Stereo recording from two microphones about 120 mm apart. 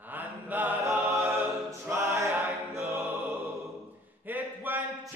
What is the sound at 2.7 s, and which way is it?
Music, 20° right (ahead or behind).